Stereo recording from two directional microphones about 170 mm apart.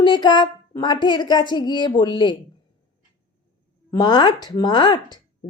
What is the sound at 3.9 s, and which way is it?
Speech, 25° left (ahead or behind).